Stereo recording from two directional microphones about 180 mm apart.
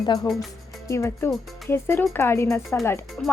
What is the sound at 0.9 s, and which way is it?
Speech, 15° left (ahead or behind).